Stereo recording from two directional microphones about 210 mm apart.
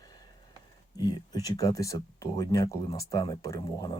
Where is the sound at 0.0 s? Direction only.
20° left (ahead or behind).